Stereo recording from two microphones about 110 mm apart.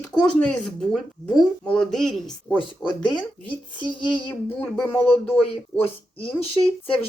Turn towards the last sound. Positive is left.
turn(degrees=55)  # may be behind; listen again after turning